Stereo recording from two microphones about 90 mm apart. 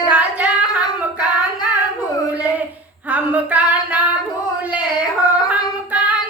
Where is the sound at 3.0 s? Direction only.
20° right (ahead or behind).